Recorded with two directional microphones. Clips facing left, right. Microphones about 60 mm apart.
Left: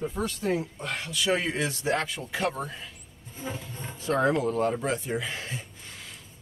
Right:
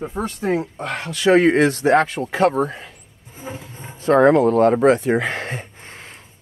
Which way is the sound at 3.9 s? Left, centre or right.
Right.